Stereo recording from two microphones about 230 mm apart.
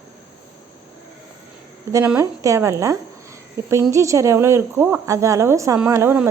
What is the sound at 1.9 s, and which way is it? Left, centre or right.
Speech, centre.